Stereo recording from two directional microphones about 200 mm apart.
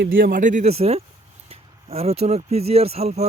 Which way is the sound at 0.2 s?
45° right (ahead or behind).